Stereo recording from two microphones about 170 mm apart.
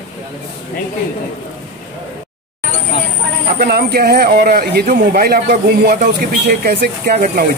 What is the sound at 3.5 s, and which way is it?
A man's voice, 65° right (ahead or behind).